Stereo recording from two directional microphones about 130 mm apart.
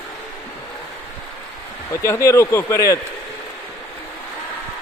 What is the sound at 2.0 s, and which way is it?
Speech, 20° left (ahead or behind).